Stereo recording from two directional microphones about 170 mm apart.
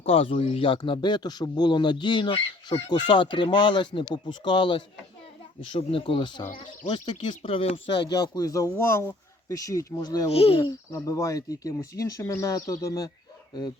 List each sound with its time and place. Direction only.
0.0 s speech: 35° left (ahead or behind)
10.2 s speech: 35° left (ahead or behind)
10.6 s speech: 20° left (ahead or behind)